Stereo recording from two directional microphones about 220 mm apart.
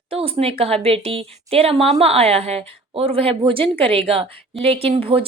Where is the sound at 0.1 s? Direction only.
25° right (ahead or behind).